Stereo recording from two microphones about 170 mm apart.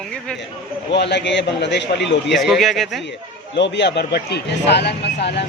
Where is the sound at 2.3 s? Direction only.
Centre (ahead or behind).